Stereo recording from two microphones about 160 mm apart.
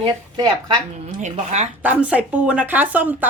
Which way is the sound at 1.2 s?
45° right (ahead or behind).